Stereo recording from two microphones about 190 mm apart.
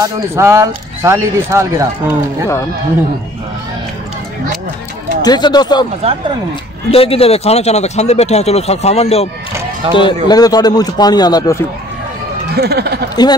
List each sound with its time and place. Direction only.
0.0 s speech: 15° right (ahead or behind)
5.2 s a man's voice: 20° left (ahead or behind)
6.9 s a man's voice: 30° left (ahead or behind)
12.5 s speech: 55° right (ahead or behind)
13.1 s a man's voice: 20° left (ahead or behind)